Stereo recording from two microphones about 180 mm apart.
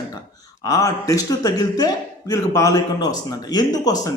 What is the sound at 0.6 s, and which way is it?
A man's voice, 20° left (ahead or behind).